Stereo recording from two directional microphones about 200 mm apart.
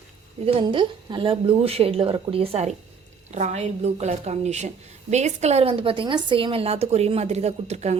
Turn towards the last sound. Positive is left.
turn(degrees=-35)  # may be behind; listen again after turning